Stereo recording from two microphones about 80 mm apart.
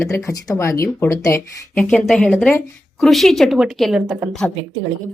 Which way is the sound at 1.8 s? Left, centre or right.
Centre.